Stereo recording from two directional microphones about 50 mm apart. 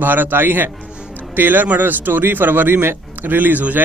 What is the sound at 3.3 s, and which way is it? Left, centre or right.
Speech, right.